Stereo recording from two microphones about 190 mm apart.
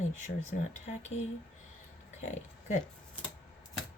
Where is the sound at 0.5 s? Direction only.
50° left (ahead or behind).